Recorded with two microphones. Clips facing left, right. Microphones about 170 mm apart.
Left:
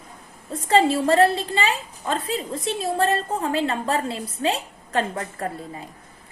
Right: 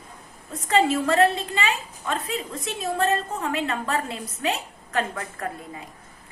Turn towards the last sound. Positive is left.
turn(degrees=30)  # may be behind; listen again after turning